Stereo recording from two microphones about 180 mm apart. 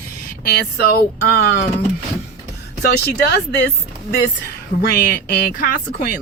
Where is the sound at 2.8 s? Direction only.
65° left (ahead or behind).